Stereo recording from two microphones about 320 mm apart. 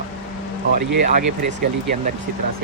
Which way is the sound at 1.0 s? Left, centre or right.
Right.